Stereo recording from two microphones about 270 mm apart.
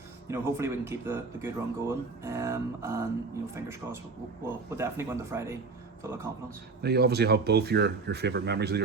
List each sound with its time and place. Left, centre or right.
0.3 s speech: centre
4.7 s a man's voice: centre
6.8 s speech: right